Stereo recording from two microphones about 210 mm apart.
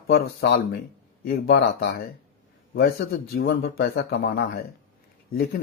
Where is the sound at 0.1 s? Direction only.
50° left (ahead or behind).